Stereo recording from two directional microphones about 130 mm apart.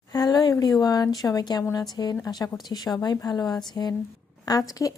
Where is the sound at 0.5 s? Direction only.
30° left (ahead or behind).